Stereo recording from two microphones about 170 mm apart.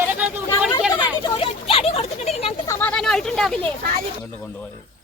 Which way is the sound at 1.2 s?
35° left (ahead or behind).